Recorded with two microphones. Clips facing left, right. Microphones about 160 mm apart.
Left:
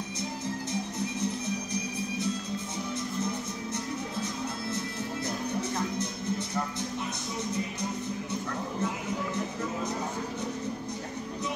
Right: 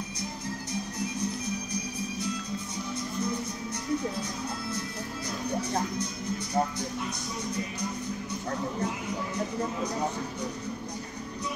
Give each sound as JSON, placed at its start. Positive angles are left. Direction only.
{"t": 0.9, "sound": "music", "side_deg": 25}